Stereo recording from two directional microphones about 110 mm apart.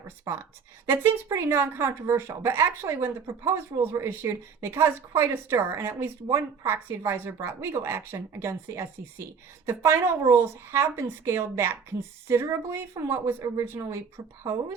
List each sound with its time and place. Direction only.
0.3 s speech: 30° right (ahead or behind)